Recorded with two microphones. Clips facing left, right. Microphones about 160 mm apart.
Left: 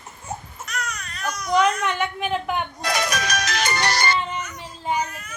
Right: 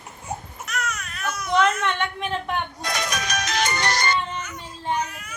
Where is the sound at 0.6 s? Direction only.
Centre (ahead or behind).